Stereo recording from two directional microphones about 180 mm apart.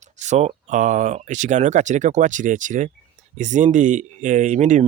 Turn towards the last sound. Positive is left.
turn(degrees=-40)  # may be behind; listen again after turning